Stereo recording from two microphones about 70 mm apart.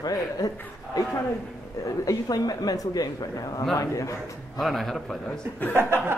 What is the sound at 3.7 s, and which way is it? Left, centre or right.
Speech, left.